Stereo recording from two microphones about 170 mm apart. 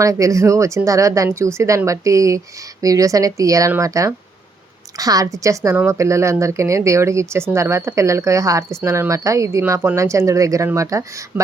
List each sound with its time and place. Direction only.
0.0 s a woman's voice: 20° right (ahead or behind)